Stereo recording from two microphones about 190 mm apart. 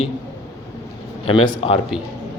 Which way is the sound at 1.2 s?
25° left (ahead or behind).